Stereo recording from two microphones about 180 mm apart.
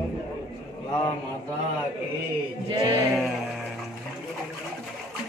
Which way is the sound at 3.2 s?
Centre (ahead or behind).